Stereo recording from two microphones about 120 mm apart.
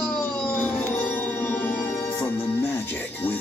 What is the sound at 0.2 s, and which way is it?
Music, 15° left (ahead or behind).